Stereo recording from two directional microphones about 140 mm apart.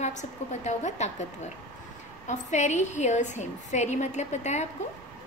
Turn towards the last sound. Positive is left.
turn(degrees=55)  # may be behind; listen again after turning